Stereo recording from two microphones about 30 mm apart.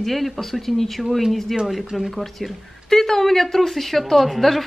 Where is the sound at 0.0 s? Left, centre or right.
Centre.